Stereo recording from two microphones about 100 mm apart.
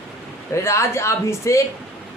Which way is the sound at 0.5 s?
30° left (ahead or behind).